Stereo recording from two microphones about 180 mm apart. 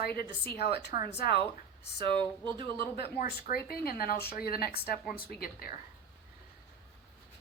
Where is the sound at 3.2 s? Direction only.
55° left (ahead or behind).